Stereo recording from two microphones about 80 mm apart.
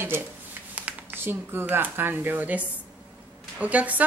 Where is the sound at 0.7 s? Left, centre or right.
Centre.